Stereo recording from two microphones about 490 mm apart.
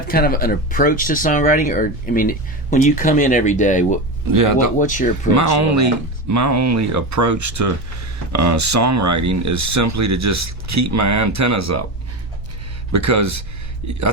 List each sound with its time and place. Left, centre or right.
0.1 s speech: centre
4.3 s speech: right
4.8 s speech: centre
5.3 s speech: right
12.9 s speech: right